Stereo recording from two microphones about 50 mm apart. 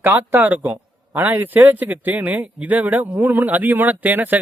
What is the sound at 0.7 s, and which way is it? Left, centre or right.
A man's voice, right.